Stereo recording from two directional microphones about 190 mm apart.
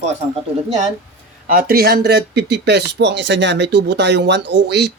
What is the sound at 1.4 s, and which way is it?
Speech, 50° right (ahead or behind).